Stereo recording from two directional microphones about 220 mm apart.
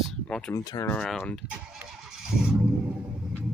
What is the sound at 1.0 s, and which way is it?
Vehicle, centre (ahead or behind).